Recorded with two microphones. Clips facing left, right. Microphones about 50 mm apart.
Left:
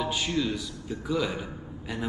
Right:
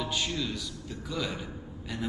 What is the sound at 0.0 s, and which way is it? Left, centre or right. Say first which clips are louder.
A man's voice: left 4 dB; centre.